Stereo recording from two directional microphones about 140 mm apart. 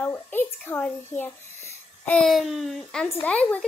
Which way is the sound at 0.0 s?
15° left (ahead or behind).